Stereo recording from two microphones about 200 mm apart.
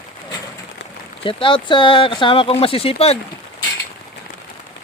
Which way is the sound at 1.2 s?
25° left (ahead or behind).